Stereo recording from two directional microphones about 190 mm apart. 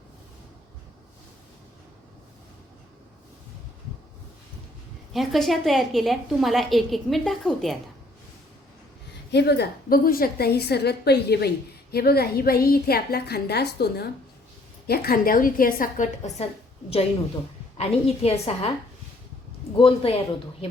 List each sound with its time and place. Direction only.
5.1 s a woman's voice: centre (ahead or behind)
9.3 s a woman's voice: 60° left (ahead or behind); by 16.5 s 40° left (ahead or behind)
17.7 s a woman's voice: 30° left (ahead or behind)
19.8 s speech: 30° left (ahead or behind)